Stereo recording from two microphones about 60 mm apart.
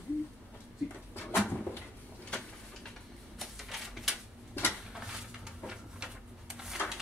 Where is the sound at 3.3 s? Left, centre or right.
Centre.